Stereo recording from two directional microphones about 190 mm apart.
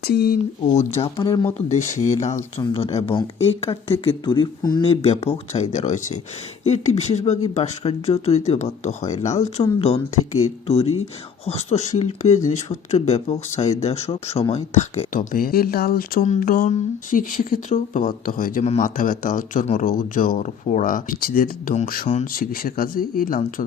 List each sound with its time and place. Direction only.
0.0 s speech: 55° left (ahead or behind)
0.7 s speech: 35° left (ahead or behind)
1.1 s speech: 20° left (ahead or behind)
1.5 s speech: 40° left (ahead or behind)